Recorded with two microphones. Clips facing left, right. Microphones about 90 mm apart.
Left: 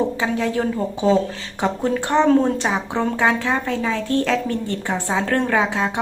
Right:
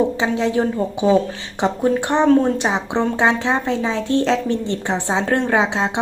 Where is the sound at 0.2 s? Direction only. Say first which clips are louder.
Right 3 dB; 25° right (ahead or behind).